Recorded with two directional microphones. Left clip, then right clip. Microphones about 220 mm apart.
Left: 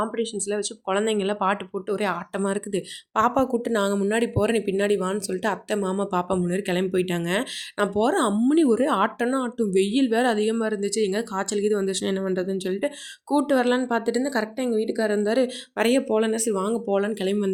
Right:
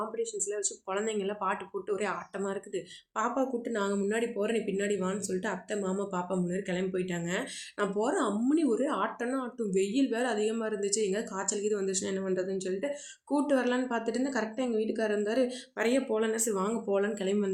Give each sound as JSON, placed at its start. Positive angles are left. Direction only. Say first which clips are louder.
{"t": 0.0, "sound": "speech", "louder": "left 7 dB", "side_deg": 45}